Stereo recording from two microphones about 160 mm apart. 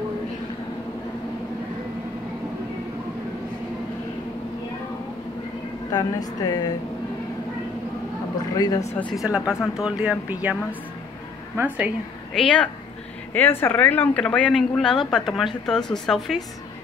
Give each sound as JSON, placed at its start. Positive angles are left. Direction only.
{"t": 5.9, "sound": "a woman's voice", "side_deg": 25}
{"t": 8.5, "sound": "a woman's voice", "side_deg": 25}
{"t": 9.1, "sound": "speech", "side_deg": -5}
{"t": 12.4, "sound": "speech", "side_deg": 5}